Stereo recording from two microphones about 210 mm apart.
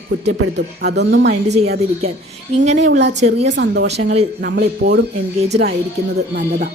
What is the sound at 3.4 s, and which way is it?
Speech, 55° right (ahead or behind).